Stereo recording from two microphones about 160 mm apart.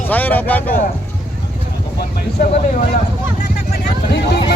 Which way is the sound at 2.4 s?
65° left (ahead or behind).